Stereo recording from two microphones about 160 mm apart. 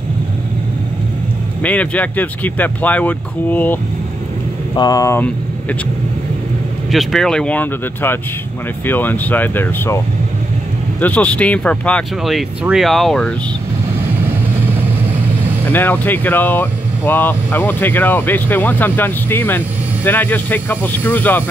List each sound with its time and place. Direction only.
1.6 s speech: 10° left (ahead or behind)
4.7 s speech: 20° left (ahead or behind)
6.9 s speech: centre (ahead or behind)
11.0 s speech: 10° left (ahead or behind)
15.7 s speech: 10° left (ahead or behind)